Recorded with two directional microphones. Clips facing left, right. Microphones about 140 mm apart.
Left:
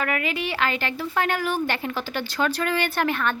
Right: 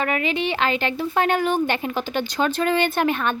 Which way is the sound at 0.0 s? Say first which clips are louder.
Right 3 dB; 25° right (ahead or behind).